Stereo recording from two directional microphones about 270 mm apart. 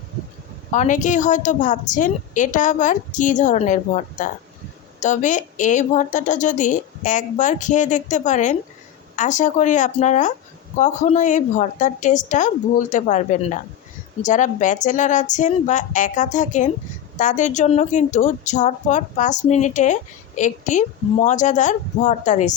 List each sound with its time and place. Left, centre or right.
0.7 s a woman's voice: left